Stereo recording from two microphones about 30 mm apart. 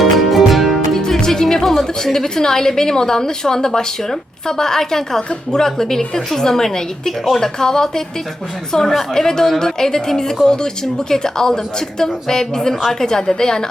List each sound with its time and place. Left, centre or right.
0.0 s music: centre
1.0 s music: centre
1.6 s a woman's voice: centre
5.3 s a woman's voice: left
5.6 s a woman's voice: centre